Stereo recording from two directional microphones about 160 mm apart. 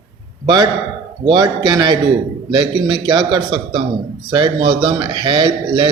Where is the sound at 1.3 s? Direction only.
25° right (ahead or behind).